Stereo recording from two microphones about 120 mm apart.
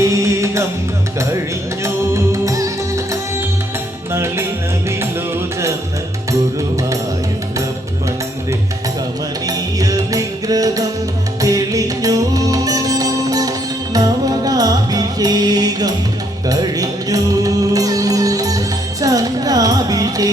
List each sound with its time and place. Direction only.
0.0 s music: 25° right (ahead or behind)
1.8 s music: 25° right (ahead or behind)
9.5 s music: 30° right (ahead or behind)